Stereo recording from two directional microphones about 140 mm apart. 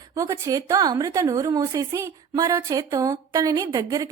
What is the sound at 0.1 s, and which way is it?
A woman's voice, 25° right (ahead or behind).